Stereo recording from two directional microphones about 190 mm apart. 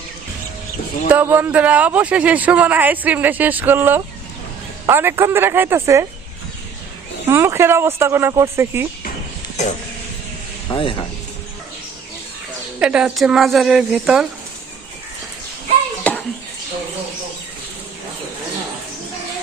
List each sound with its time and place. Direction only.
1.0 s a man's voice: 10° right (ahead or behind)
7.3 s a man's voice: 15° right (ahead or behind)
10.7 s speech: 25° left (ahead or behind)
12.8 s a woman's voice: 5° right (ahead or behind)